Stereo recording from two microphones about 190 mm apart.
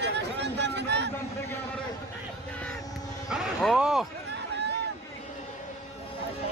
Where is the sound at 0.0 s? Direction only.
65° right (ahead or behind).